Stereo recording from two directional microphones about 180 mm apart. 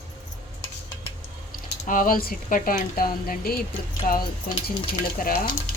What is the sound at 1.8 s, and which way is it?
Speech, 50° left (ahead or behind).